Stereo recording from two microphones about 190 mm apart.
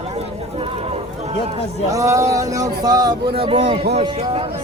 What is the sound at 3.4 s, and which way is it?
Speech, 30° right (ahead or behind).